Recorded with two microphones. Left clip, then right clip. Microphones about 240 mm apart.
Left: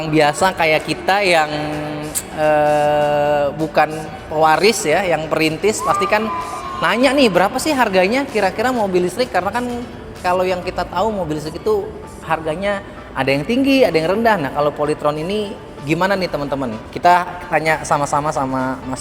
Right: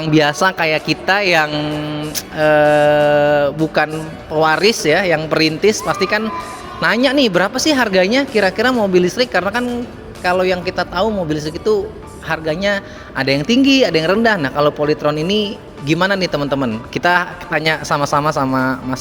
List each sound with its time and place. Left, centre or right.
0.0 s a man's voice: right